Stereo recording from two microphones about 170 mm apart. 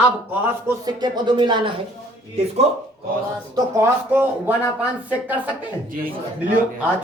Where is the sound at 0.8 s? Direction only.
25° right (ahead or behind).